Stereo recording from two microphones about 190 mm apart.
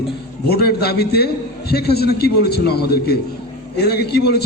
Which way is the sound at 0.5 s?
55° left (ahead or behind).